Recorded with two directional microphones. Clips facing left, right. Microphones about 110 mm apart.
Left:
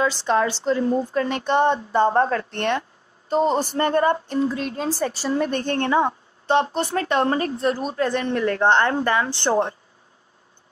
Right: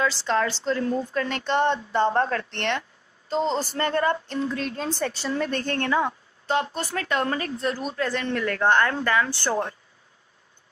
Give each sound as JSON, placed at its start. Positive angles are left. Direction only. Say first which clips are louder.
{"t": 0.2, "sound": "a woman's voice", "louder": "left 4 dB", "side_deg": 15}
{"t": 5.3, "sound": "speech", "louder": "left 5 dB", "side_deg": 20}